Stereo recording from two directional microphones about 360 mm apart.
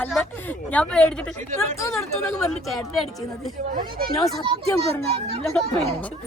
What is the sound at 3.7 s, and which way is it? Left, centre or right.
A child's voice, right.